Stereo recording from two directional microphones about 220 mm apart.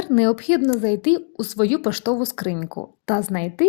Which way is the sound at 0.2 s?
30° left (ahead or behind).